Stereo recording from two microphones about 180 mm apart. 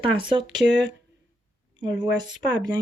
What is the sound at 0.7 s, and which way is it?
Speech, 75° right (ahead or behind).